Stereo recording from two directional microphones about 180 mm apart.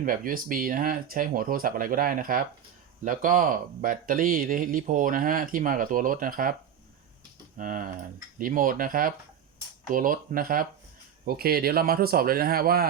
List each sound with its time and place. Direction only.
0.0 s speech: 50° right (ahead or behind)